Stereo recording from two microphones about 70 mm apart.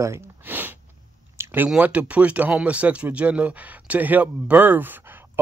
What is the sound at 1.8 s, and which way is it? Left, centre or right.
Speech, centre.